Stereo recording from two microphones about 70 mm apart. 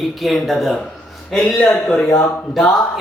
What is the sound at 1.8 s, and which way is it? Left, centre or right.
Speech, centre.